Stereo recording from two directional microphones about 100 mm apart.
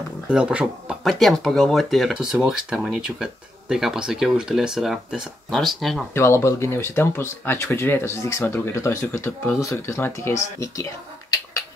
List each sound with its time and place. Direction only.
0.3 s speech: 10° right (ahead or behind)
1.0 s speech: centre (ahead or behind)
6.1 s speech: 25° left (ahead or behind)